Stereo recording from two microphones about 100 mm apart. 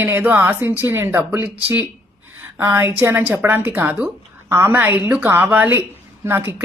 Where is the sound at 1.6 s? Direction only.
20° right (ahead or behind).